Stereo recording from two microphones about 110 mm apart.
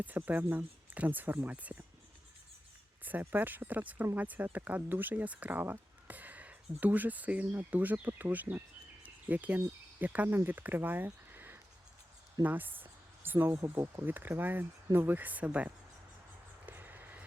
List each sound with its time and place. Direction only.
0.3 s speech: 15° right (ahead or behind)
3.0 s speech: 15° right (ahead or behind)
9.0 s cricket: 15° right (ahead or behind)
10.0 s speech: 15° right (ahead or behind)
14.0 s speech: 15° right (ahead or behind)
16.6 s a sound: 15° right (ahead or behind)